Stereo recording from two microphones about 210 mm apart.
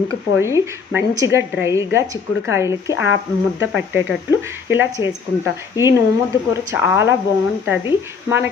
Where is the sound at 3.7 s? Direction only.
10° right (ahead or behind).